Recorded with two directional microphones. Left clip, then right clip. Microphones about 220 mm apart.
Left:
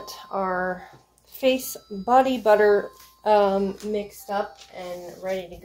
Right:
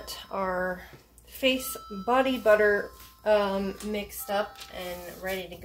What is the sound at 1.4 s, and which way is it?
Speech, 25° left (ahead or behind).